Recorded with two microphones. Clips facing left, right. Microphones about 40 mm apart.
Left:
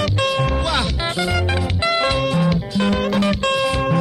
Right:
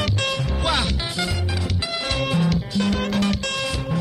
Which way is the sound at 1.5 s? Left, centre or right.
Left.